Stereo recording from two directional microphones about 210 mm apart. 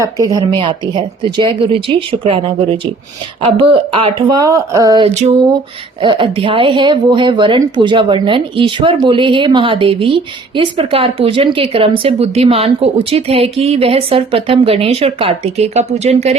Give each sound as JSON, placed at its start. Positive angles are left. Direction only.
{"t": 0.0, "sound": "speech", "side_deg": -15}
{"t": 5.0, "sound": "a sound", "side_deg": -30}
{"t": 6.0, "sound": "speech", "side_deg": -25}